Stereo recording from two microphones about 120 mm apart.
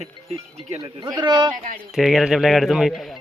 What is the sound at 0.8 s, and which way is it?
Speech, 35° right (ahead or behind).